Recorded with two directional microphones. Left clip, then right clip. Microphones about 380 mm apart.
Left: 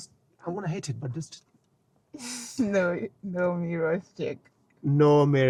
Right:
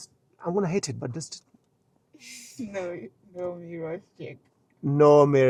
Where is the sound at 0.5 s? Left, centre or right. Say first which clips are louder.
Right 9 dB; right.